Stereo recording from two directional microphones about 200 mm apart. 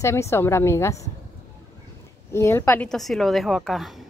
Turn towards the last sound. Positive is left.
turn(degrees=0)  # may be behind; listen again after turning